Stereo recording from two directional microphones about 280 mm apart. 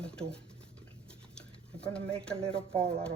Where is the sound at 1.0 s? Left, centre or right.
Centre.